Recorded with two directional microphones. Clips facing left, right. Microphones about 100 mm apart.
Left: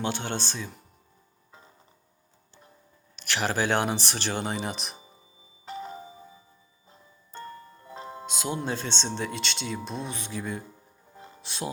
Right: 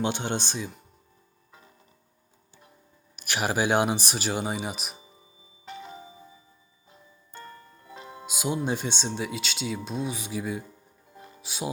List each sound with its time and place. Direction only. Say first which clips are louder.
0.0 s speech: right 2 dB; 20° right (ahead or behind)
3.2 s speech: right 1 dB; 15° right (ahead or behind)
5.6 s tubular bells: left 4 dB; 40° left (ahead or behind)
7.3 s music: left 4 dB; 30° left (ahead or behind)
8.3 s speech: right 3 dB; 15° right (ahead or behind)
11.3 s music: right 1 dB; 5° right (ahead or behind)